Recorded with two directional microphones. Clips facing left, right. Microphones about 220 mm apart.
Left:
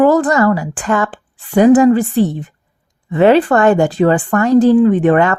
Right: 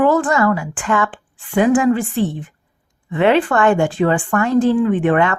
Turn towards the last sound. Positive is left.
turn(degrees=40)  # may be behind; listen again after turning